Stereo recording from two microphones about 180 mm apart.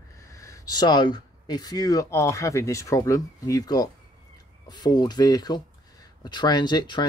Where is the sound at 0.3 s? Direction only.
15° left (ahead or behind).